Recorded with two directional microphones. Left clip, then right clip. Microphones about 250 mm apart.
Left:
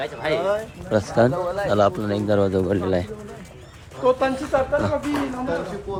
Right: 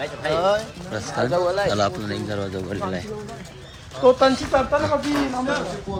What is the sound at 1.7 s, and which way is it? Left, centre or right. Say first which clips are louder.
Speech: left 4 dB; centre.